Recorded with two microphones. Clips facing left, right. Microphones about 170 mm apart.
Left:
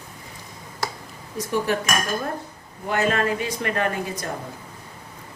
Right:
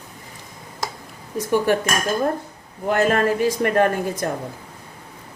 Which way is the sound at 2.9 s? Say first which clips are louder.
Right 4 dB; 50° right (ahead or behind).